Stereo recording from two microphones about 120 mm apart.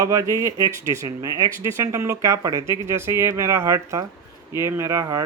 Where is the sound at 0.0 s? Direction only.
25° right (ahead or behind).